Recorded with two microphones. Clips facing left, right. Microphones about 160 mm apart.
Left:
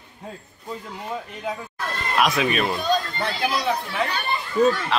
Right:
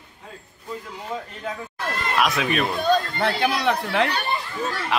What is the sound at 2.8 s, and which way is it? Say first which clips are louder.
Speech: right 3 dB; 60° right (ahead or behind).